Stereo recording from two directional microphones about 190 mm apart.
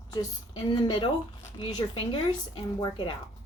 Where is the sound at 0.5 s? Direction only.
25° left (ahead or behind).